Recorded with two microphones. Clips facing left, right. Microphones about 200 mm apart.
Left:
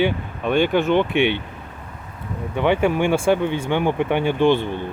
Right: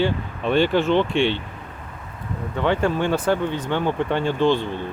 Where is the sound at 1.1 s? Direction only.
60° left (ahead or behind).